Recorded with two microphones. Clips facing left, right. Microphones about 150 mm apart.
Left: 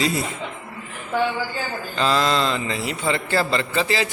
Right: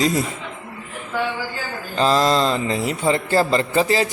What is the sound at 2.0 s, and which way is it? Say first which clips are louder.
A man's voice: right 3 dB; 40° right (ahead or behind).